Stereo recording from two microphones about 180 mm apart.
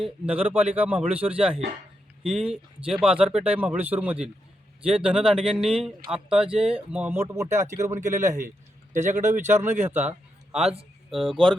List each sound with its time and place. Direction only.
0.0 s speech: 10° right (ahead or behind)
8.4 s a man's voice: 45° right (ahead or behind)
9.5 s a man's voice: 15° right (ahead or behind)